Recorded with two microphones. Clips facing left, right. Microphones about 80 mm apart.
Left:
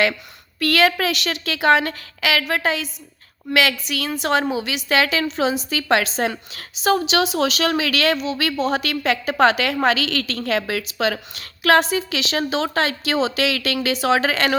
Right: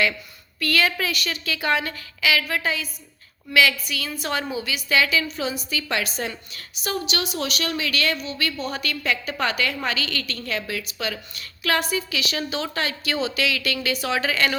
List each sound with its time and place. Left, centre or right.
0.6 s a woman's voice: left